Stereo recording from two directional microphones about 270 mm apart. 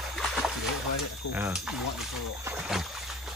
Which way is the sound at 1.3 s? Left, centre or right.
Centre.